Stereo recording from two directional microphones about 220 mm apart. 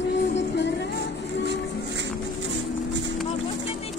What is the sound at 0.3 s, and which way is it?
Music, 55° left (ahead or behind).